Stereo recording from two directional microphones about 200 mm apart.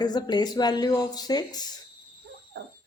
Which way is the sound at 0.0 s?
20° left (ahead or behind).